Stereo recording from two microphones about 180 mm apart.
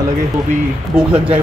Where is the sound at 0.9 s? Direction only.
10° right (ahead or behind).